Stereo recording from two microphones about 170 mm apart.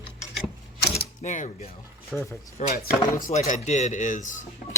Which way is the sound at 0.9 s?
45° left (ahead or behind).